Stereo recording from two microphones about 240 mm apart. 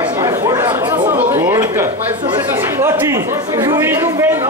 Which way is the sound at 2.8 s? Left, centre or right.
Centre.